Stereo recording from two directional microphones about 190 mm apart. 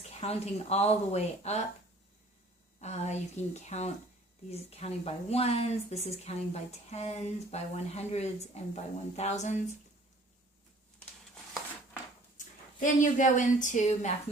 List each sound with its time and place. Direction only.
0.1 s speech: 35° left (ahead or behind)
2.7 s speech: 35° left (ahead or behind)
12.8 s speech: 40° left (ahead or behind)